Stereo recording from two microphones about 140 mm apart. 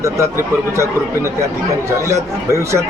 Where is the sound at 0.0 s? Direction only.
20° right (ahead or behind).